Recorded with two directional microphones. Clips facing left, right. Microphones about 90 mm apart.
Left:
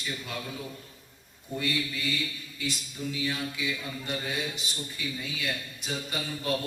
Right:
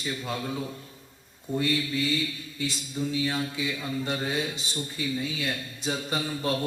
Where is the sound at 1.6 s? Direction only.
30° right (ahead or behind).